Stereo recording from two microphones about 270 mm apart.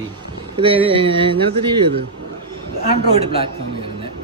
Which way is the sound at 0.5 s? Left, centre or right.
Centre.